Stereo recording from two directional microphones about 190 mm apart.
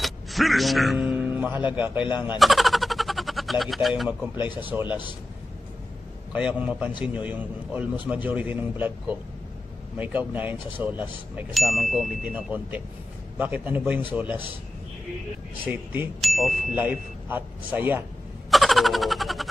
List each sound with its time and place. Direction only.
0.0 s speech: centre (ahead or behind)
2.1 s a sound: 5° right (ahead or behind)
4.8 s a man's voice: 25° left (ahead or behind)
6.3 s speech: 5° right (ahead or behind)
15.6 s speech: 10° right (ahead or behind)
16.2 s speech: centre (ahead or behind)
16.7 s speech: 10° right (ahead or behind)
18.5 s a sound: centre (ahead or behind)